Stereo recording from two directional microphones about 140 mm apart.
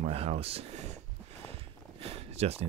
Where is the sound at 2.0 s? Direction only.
45° right (ahead or behind).